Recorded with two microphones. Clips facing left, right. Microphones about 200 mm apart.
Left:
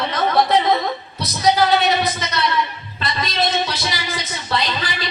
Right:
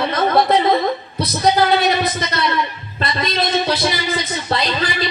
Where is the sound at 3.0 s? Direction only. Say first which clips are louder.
Right 2 dB; 55° right (ahead or behind).